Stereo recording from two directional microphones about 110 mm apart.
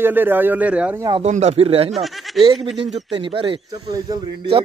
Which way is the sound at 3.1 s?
55° right (ahead or behind).